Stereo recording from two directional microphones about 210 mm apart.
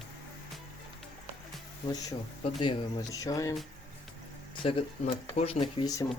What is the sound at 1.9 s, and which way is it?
Speech, 20° left (ahead or behind).